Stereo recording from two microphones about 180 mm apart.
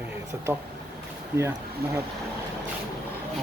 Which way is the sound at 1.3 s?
10° right (ahead or behind).